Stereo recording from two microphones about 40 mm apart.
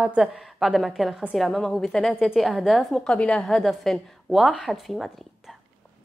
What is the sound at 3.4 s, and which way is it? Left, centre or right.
A woman's voice, centre.